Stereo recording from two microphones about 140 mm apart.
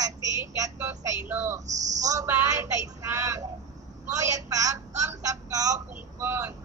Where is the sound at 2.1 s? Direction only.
20° right (ahead or behind).